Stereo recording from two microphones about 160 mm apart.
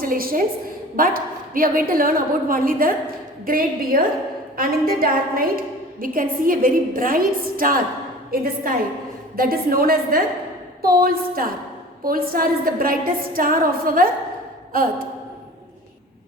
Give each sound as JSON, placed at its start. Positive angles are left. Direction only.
{"t": 0.0, "sound": "a woman's voice", "side_deg": -65}